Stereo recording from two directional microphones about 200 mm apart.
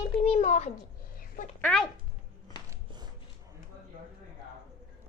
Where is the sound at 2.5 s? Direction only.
25° left (ahead or behind).